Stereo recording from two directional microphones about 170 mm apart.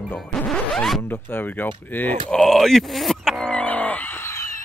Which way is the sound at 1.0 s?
15° left (ahead or behind).